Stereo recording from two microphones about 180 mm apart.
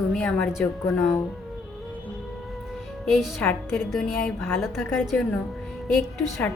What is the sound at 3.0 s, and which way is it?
A woman's voice, centre (ahead or behind).